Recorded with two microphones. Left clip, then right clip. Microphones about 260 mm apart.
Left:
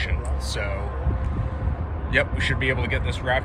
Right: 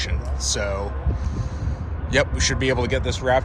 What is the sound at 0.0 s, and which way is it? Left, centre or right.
Music, centre.